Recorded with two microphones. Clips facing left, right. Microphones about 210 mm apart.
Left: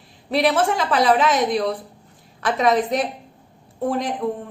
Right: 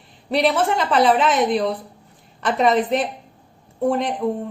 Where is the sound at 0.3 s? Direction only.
Centre (ahead or behind).